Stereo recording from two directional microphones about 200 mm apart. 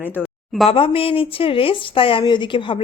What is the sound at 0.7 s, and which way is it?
Speech, 30° left (ahead or behind).